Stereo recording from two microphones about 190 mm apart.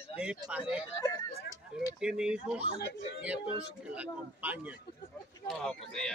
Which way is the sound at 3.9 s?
5° right (ahead or behind).